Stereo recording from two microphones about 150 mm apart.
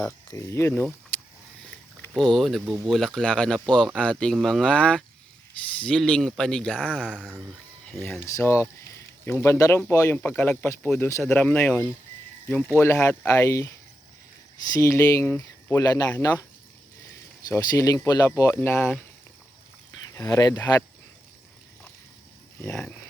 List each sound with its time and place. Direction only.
0.0 s speech: 15° left (ahead or behind)
2.1 s speech: centre (ahead or behind)
6.8 s speech: 5° right (ahead or behind)
8.2 s speech: 20° left (ahead or behind)
14.7 s speech: 20° left (ahead or behind)
17.5 s speech: 20° left (ahead or behind)
20.1 s speech: 25° left (ahead or behind)
22.6 s speech: 15° left (ahead or behind)